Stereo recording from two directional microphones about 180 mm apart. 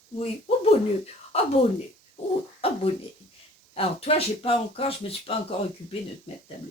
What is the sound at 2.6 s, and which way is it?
Speech, 30° left (ahead or behind).